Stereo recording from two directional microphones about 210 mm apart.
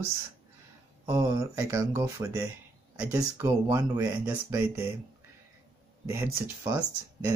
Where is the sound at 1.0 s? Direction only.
15° right (ahead or behind).